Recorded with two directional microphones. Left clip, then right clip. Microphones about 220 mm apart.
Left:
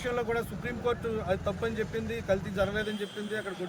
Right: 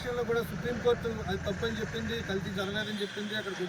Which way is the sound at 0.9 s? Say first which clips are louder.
Even; 35° left (ahead or behind).